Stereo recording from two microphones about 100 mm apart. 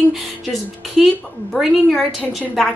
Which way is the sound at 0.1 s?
Centre (ahead or behind).